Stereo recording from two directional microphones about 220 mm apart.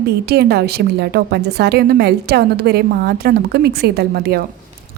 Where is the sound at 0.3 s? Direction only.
50° right (ahead or behind).